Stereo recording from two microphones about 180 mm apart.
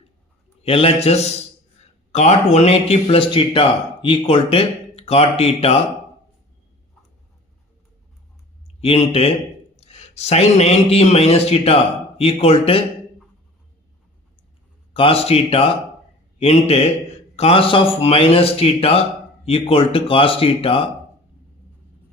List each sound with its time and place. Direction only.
0.6 s a man's voice: 30° left (ahead or behind)
8.8 s a man's voice: 35° left (ahead or behind)
14.9 s a man's voice: 30° left (ahead or behind)